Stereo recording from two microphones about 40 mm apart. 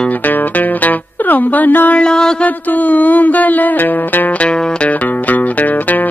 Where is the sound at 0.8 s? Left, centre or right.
Left.